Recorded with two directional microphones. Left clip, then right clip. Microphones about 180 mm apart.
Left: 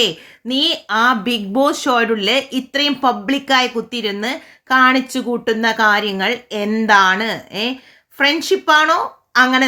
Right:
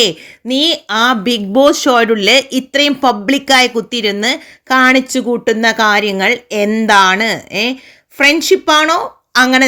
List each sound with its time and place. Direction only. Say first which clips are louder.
0.0 s speech: right 4 dB; 40° right (ahead or behind)